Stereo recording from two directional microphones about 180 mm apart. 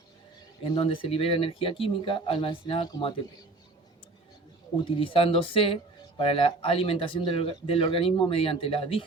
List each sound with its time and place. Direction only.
0.6 s speech: 30° left (ahead or behind)
4.9 s speech: 30° left (ahead or behind)